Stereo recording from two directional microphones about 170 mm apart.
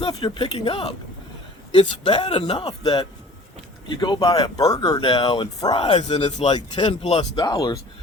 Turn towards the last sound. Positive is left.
turn(degrees=25)  # may be behind; listen again after turning